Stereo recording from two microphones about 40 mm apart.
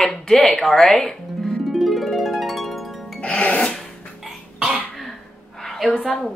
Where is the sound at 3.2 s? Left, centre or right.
Left.